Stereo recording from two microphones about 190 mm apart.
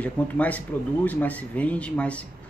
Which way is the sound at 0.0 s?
10° left (ahead or behind).